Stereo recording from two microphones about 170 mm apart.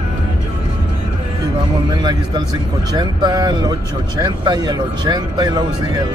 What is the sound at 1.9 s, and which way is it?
A man's voice, 25° right (ahead or behind).